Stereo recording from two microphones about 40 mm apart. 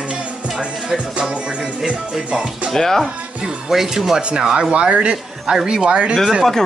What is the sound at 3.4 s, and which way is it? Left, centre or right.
Speech, centre.